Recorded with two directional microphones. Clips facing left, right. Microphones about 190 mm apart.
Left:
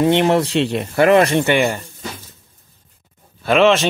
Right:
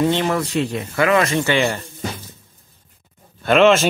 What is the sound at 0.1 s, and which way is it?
Speech, 25° left (ahead or behind).